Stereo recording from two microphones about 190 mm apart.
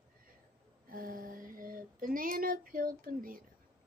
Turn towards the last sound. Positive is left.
turn(degrees=-50)  # may be behind; listen again after turning